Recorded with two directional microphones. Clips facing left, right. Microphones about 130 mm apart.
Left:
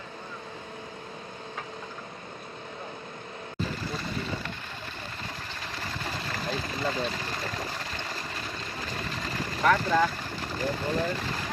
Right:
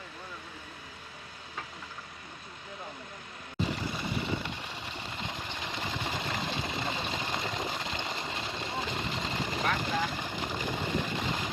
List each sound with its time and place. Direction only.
5.2 s engine: 20° right (ahead or behind)
10.1 s vehicle: 20° right (ahead or behind)